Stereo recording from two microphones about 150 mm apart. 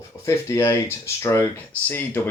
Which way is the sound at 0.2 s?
20° left (ahead or behind).